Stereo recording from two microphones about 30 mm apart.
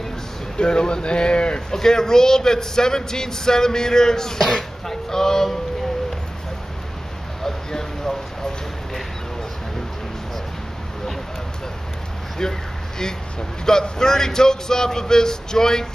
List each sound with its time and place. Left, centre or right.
0.6 s speech: left
1.7 s a man's voice: centre
4.4 s speech: centre
7.4 s a sound: centre
13.7 s a man's voice: left